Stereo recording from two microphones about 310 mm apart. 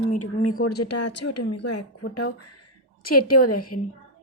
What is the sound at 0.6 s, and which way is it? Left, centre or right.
Speech, left.